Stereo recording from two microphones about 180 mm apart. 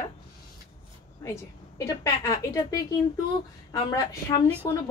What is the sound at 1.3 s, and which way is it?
A woman's voice, 15° left (ahead or behind).